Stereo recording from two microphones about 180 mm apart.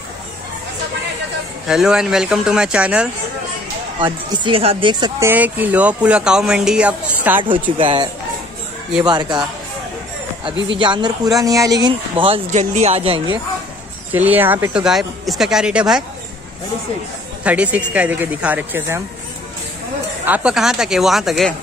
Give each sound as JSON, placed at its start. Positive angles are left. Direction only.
{"t": 1.7, "sound": "speech", "side_deg": -5}
{"t": 4.0, "sound": "speech", "side_deg": -25}
{"t": 5.2, "sound": "speech", "side_deg": -10}
{"t": 7.7, "sound": "speech", "side_deg": -30}
{"t": 10.8, "sound": "speech", "side_deg": -25}
{"t": 12.4, "sound": "speech", "side_deg": -40}
{"t": 14.1, "sound": "speech", "side_deg": -10}
{"t": 17.4, "sound": "speech", "side_deg": -5}
{"t": 20.2, "sound": "speech", "side_deg": -5}